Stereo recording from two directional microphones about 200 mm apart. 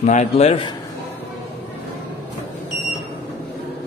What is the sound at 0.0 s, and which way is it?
Speech, 35° left (ahead or behind).